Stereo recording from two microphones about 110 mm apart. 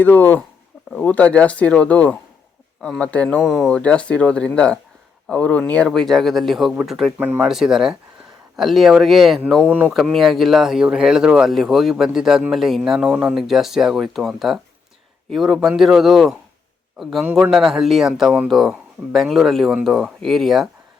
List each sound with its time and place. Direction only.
0.0 s speech: 15° left (ahead or behind)
3.4 s speech: centre (ahead or behind)
7.2 s speech: 20° right (ahead or behind)
7.4 s speech: 5° right (ahead or behind)
9.6 s speech: 15° right (ahead or behind)
9.9 s speech: centre (ahead or behind)